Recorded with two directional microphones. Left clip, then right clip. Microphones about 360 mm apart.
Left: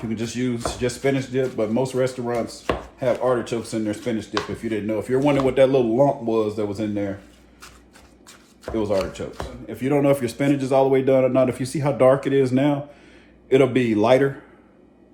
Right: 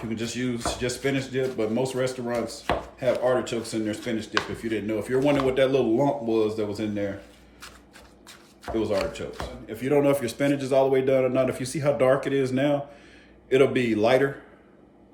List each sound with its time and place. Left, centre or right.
0.1 s a man's voice: centre
8.7 s speech: centre
9.6 s a man's voice: centre